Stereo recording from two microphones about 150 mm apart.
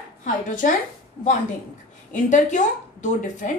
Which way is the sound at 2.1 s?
55° left (ahead or behind).